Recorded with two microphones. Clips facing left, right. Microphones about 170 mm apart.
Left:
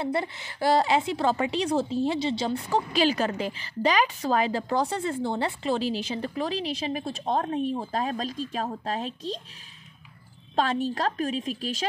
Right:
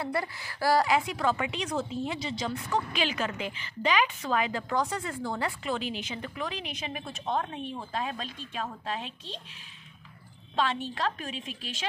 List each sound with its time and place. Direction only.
0.0 s a woman's voice: 25° left (ahead or behind); by 9.4 s 40° left (ahead or behind)
10.5 s a woman's voice: 40° left (ahead or behind)